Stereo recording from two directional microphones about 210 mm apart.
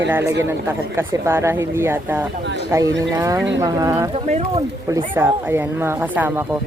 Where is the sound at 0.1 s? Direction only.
10° right (ahead or behind).